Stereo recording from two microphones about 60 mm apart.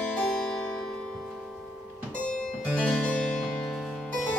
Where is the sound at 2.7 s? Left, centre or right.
Left.